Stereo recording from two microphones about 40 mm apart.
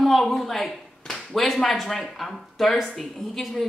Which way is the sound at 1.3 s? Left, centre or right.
Centre.